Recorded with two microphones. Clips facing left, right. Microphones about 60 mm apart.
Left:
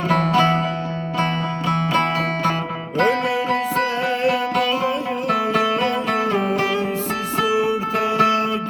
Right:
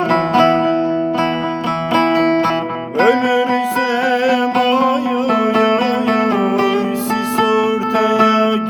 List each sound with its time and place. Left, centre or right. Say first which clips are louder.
0.1 s music: right 4 dB; right
1.9 s music: right 10 dB; centre
3.0 s music: right 6 dB; right
7.3 s music: right 4 dB; right